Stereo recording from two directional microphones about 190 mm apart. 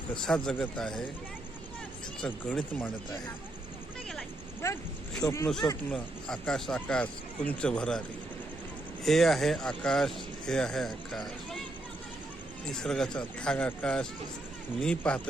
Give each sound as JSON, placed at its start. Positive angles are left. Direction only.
{"t": 0.1, "sound": "speech", "side_deg": 5}
{"t": 2.2, "sound": "speech", "side_deg": 5}
{"t": 4.6, "sound": "speech", "side_deg": 15}
{"t": 5.9, "sound": "speech", "side_deg": 5}
{"t": 9.0, "sound": "speech", "side_deg": 0}
{"t": 12.7, "sound": "speech", "side_deg": 0}